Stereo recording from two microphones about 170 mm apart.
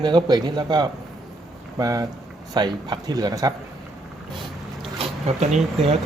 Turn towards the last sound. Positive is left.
turn(degrees=-40)  # may be behind; listen again after turning